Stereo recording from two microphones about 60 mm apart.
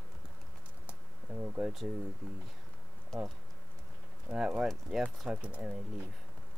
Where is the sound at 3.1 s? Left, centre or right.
Centre.